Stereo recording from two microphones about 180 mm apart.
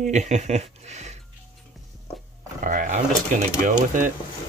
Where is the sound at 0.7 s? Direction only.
40° right (ahead or behind).